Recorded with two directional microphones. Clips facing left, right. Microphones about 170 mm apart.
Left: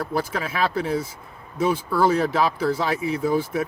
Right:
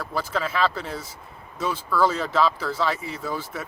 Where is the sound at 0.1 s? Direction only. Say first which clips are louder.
Left 1 dB; 10° left (ahead or behind).